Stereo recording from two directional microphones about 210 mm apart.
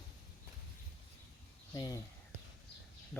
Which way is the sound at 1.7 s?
15° left (ahead or behind).